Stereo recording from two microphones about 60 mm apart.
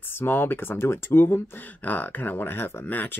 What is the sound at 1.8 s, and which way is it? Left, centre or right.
Speech, left.